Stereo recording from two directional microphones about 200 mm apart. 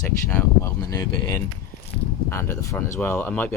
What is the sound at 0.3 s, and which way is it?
Speech, 10° left (ahead or behind).